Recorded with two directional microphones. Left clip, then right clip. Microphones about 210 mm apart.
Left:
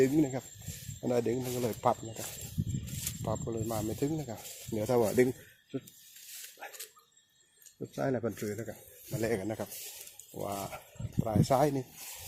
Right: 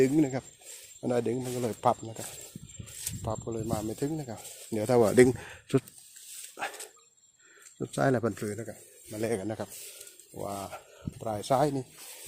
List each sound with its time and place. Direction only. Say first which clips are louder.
0.0 s speech: right 2 dB; 30° right (ahead or behind)
1.0 s speech: right 1 dB; 15° right (ahead or behind)
1.8 s speech: right 3 dB; 20° right (ahead or behind)
3.2 s speech: right 1 dB; 15° right (ahead or behind)
4.7 s speech: right 5 dB; 30° right (ahead or behind)
7.9 s speech: right 6 dB; 35° right (ahead or behind)
8.4 s speech: right 2 dB; 15° right (ahead or behind)